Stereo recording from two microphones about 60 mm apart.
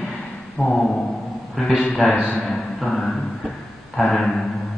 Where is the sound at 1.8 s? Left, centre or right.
Left.